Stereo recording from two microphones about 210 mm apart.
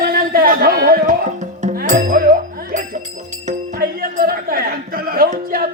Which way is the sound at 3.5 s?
45° right (ahead or behind).